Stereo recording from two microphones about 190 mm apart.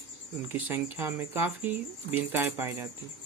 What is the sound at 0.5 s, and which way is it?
Speech, 10° right (ahead or behind).